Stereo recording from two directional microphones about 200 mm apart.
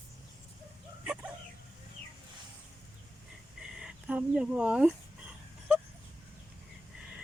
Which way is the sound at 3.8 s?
5° right (ahead or behind).